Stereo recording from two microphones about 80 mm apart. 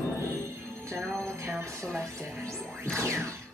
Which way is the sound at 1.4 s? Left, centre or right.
Right.